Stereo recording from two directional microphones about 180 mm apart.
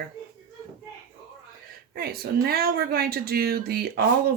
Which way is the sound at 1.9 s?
60° right (ahead or behind).